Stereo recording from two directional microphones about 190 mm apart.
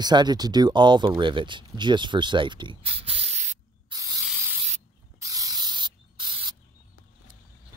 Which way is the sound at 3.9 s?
20° right (ahead or behind).